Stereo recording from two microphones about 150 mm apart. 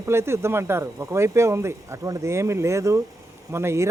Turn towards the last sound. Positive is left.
turn(degrees=-20)  # may be behind; listen again after turning